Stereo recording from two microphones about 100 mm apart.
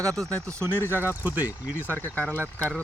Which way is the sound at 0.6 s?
20° left (ahead or behind).